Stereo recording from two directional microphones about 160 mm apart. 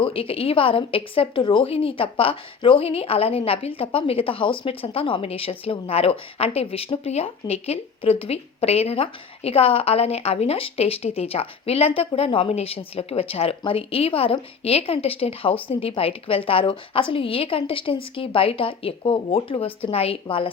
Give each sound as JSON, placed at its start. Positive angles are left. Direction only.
{"t": 0.0, "sound": "a woman's voice", "side_deg": 35}